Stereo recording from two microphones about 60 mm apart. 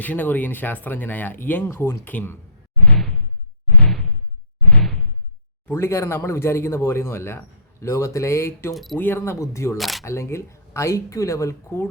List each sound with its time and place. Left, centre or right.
0.0 s speech: left
1.7 s speech: left
2.8 s a sound: centre
5.6 s speech: left
8.7 s speech: centre
9.0 s speech: left
9.7 s speech: centre
10.0 s speech: left